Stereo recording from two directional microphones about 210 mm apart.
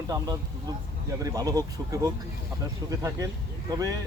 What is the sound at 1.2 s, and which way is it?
Speech, 15° right (ahead or behind).